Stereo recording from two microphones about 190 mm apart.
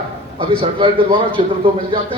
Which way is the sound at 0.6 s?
25° right (ahead or behind).